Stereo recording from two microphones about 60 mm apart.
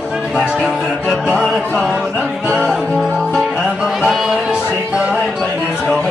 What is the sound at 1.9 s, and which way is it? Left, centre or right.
Music, right.